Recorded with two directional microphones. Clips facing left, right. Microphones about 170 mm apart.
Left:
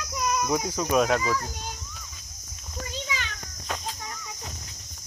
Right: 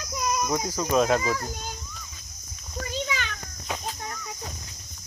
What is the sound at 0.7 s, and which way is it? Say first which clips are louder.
Speech: right 1 dB; 5° left (ahead or behind).